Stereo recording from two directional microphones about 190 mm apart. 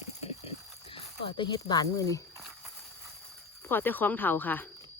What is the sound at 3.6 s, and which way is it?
Speech, 10° left (ahead or behind).